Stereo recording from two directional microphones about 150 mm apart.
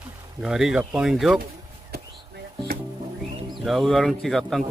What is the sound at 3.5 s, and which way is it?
Speech, centre (ahead or behind).